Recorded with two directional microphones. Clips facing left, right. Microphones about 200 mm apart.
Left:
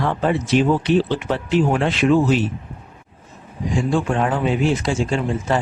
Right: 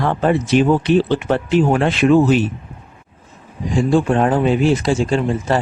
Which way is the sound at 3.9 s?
35° right (ahead or behind).